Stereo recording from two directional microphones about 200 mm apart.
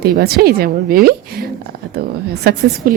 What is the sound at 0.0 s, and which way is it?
A woman's voice, 55° right (ahead or behind).